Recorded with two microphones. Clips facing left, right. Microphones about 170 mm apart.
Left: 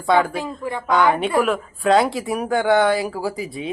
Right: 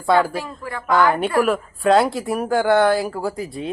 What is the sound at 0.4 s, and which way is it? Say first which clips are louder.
Speech: left 4 dB; 20° left (ahead or behind).